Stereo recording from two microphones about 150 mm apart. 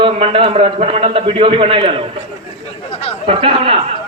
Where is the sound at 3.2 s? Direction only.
35° right (ahead or behind).